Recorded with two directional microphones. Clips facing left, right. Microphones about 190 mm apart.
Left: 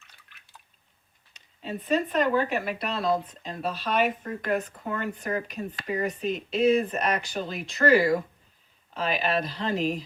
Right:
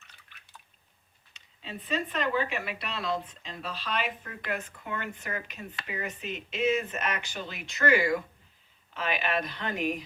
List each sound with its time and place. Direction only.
0.0 s drip: centre (ahead or behind)
1.6 s speech: 45° left (ahead or behind); by 10.0 s 30° left (ahead or behind)